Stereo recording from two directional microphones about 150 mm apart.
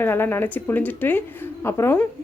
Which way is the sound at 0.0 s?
15° left (ahead or behind).